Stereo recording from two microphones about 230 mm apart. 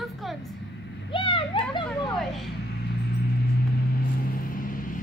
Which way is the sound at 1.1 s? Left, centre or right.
Left.